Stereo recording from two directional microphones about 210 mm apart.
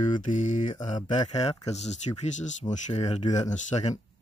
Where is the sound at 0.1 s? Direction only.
35° left (ahead or behind).